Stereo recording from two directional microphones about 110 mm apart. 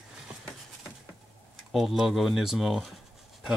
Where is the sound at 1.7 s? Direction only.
Centre (ahead or behind).